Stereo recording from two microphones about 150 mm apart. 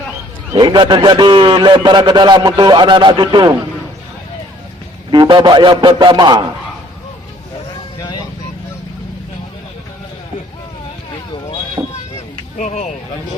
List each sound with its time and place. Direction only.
0.5 s a man's voice: 30° right (ahead or behind)
5.1 s a man's voice: 30° right (ahead or behind)
11.8 s vehicle: 20° right (ahead or behind)
12.5 s speech: 55° left (ahead or behind)